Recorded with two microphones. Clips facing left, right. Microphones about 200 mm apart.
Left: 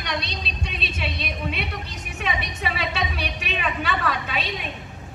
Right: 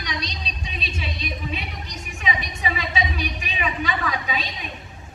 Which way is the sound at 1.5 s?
70° left (ahead or behind).